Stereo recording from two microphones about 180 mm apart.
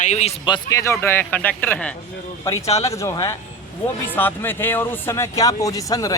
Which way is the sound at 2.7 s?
35° left (ahead or behind).